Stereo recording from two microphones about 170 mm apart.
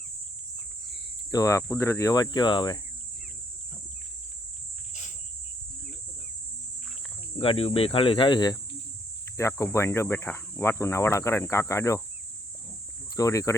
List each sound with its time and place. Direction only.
1.3 s cricket: 20° left (ahead or behind)
7.3 s cricket: 35° left (ahead or behind)
9.4 s speech: 15° left (ahead or behind)
13.1 s cricket: 20° left (ahead or behind)